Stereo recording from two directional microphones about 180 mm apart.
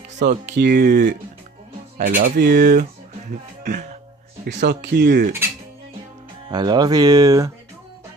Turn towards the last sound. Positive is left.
turn(degrees=-20)  # may be behind; listen again after turning